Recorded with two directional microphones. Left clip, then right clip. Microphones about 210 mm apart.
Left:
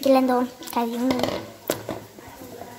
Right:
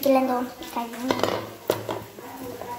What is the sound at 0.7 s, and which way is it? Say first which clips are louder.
Speech: left 6 dB; 45° left (ahead or behind).